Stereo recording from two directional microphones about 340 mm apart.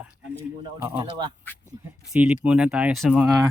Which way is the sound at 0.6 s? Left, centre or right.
Centre.